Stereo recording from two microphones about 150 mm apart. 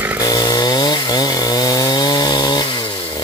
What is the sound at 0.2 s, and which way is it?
Chainsaw, 25° left (ahead or behind).